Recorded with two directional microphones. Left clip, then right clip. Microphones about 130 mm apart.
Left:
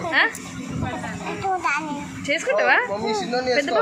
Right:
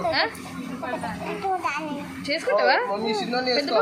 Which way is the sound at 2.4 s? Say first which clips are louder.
Left 2 dB; 20° right (ahead or behind).